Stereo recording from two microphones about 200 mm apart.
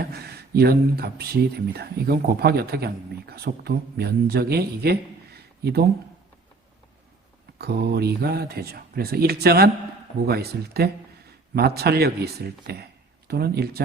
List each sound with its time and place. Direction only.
0.0 s speech: 55° right (ahead or behind)
7.6 s speech: 55° right (ahead or behind)